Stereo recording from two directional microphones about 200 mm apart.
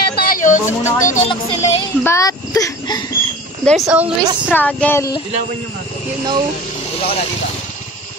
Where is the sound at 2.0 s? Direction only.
15° left (ahead or behind).